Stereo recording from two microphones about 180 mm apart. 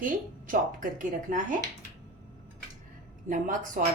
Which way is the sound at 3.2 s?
45° right (ahead or behind).